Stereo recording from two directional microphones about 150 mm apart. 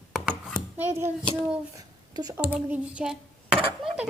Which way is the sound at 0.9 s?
15° right (ahead or behind).